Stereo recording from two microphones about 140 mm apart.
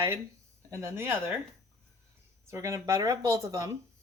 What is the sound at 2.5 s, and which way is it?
A woman's voice, 20° right (ahead or behind).